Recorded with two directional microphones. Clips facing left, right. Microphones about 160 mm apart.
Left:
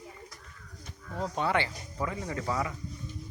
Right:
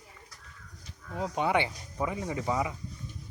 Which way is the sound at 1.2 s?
15° right (ahead or behind).